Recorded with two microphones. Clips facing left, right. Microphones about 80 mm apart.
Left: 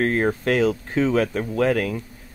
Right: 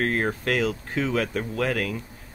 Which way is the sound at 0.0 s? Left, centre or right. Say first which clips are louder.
Left 4 dB; centre.